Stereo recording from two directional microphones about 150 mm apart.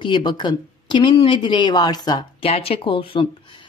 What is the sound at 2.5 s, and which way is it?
Speech, 40° left (ahead or behind).